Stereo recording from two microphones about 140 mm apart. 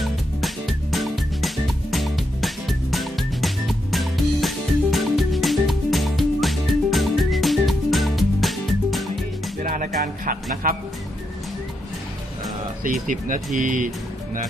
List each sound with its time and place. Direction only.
0.0 s music: centre (ahead or behind)
9.6 s music: 70° right (ahead or behind)
12.8 s speech: 70° right (ahead or behind)